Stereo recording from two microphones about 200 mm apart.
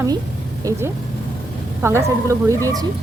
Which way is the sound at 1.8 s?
15° right (ahead or behind).